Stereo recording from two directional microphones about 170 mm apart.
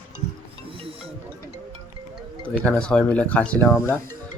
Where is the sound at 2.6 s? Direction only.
5° left (ahead or behind).